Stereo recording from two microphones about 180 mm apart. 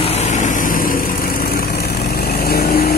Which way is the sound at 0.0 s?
35° left (ahead or behind).